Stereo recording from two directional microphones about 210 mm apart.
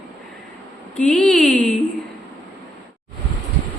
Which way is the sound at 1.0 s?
5° left (ahead or behind).